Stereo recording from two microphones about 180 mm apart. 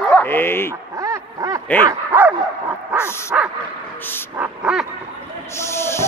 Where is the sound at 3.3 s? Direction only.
10° right (ahead or behind).